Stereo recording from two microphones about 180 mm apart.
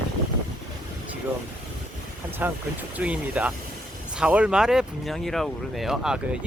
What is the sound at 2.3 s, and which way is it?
Speech, 10° right (ahead or behind).